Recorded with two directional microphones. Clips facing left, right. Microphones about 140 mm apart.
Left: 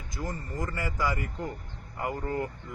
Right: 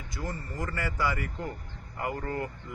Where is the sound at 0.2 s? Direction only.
20° left (ahead or behind).